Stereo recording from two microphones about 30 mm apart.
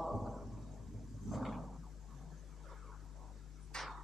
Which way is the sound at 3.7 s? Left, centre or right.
Left.